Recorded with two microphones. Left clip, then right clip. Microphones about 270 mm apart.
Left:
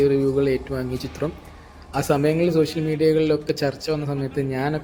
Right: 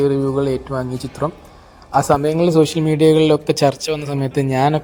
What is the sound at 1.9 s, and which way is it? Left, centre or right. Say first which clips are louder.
Speech: right 6 dB; centre.